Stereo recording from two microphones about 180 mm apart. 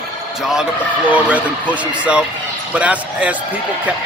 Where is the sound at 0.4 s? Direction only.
5° right (ahead or behind).